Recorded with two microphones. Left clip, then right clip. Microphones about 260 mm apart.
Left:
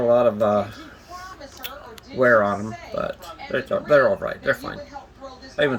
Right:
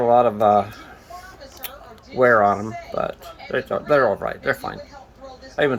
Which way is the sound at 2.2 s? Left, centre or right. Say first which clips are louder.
Right 2 dB; centre.